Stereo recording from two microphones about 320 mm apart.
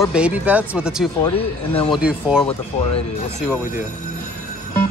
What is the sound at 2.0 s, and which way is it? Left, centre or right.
Speech, centre.